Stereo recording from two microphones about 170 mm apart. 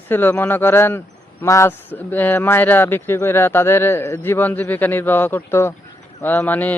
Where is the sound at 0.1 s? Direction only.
10° left (ahead or behind).